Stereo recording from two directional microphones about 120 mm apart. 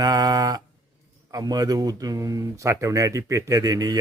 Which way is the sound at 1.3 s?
30° right (ahead or behind).